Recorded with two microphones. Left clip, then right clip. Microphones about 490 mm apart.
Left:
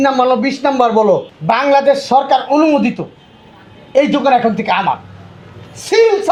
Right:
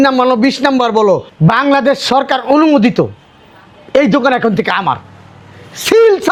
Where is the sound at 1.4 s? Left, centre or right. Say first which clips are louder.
Even; right.